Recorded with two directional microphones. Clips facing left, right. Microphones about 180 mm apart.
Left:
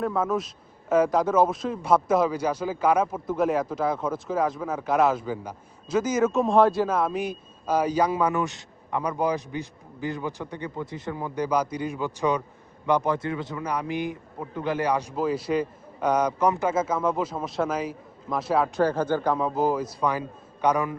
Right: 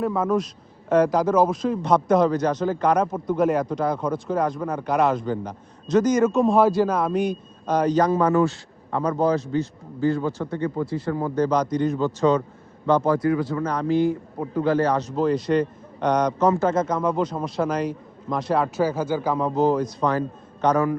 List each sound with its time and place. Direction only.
0.0 s a man's voice: centre (ahead or behind)
13.1 s a man's voice: 25° left (ahead or behind)